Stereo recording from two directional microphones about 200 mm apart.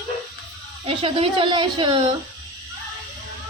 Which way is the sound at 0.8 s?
30° right (ahead or behind).